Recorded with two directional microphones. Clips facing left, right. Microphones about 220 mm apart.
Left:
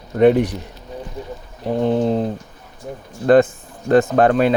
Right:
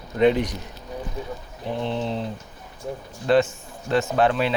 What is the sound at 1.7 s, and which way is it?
Speech, 45° left (ahead or behind).